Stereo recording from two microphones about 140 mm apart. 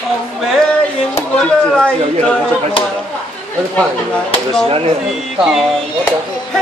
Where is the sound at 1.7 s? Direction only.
5° left (ahead or behind).